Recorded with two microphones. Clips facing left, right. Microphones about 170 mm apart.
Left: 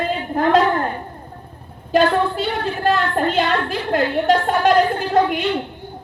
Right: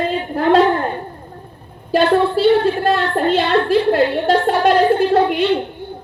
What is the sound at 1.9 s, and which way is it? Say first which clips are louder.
A woman's voice: right 2 dB; 35° right (ahead or behind).